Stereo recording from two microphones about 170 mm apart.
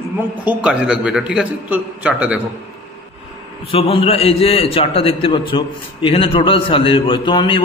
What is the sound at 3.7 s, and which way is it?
A man's voice, 35° left (ahead or behind).